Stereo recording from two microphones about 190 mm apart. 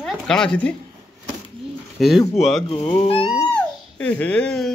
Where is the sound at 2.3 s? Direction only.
Centre (ahead or behind).